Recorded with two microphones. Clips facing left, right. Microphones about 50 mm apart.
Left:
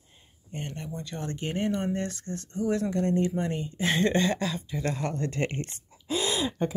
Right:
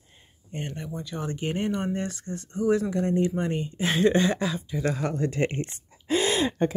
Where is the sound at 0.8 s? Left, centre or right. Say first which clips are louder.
Right 2 dB; centre.